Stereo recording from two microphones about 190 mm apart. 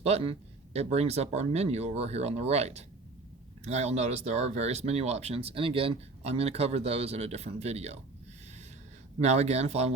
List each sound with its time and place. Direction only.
0.0 s speech: 30° right (ahead or behind)
9.2 s speech: 35° right (ahead or behind)